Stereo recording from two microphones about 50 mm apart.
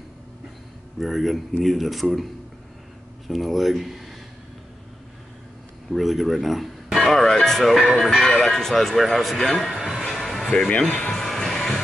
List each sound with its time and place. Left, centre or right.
0.9 s speech: centre
3.3 s speech: centre
5.9 s speech: centre
9.7 s music: centre
10.9 s speech: left
11.1 s music: centre